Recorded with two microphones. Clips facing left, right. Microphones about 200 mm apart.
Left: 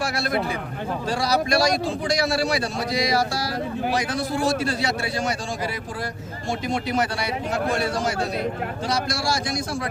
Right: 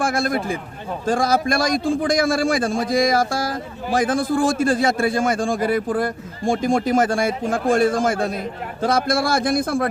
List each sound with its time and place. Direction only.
0.0 s a man's voice: 50° right (ahead or behind)